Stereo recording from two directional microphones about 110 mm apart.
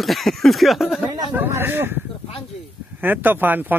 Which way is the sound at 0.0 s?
Centre (ahead or behind).